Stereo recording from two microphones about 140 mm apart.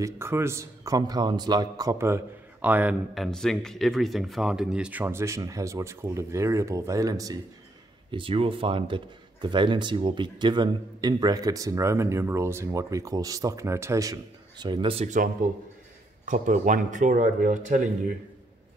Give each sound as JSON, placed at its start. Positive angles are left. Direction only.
{"t": 0.0, "sound": "speech", "side_deg": -20}
{"t": 3.2, "sound": "speech", "side_deg": 5}
{"t": 5.0, "sound": "speech", "side_deg": -20}
{"t": 8.1, "sound": "speech", "side_deg": -40}
{"t": 16.3, "sound": "speech", "side_deg": -65}